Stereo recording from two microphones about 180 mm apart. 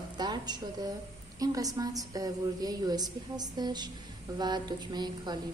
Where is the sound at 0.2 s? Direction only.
25° right (ahead or behind).